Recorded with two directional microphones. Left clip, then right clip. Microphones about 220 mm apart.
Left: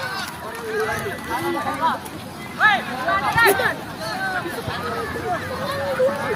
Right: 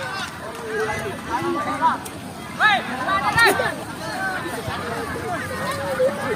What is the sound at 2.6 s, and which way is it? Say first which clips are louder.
Music: left 1 dB; 5° right (ahead or behind).